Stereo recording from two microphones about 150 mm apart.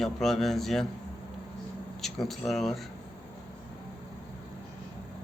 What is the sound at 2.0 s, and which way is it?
Speech, centre (ahead or behind).